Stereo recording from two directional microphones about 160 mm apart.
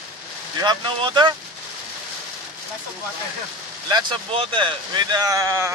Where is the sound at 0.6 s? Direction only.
30° right (ahead or behind).